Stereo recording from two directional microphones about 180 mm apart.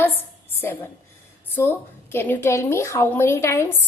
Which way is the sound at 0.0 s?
10° left (ahead or behind).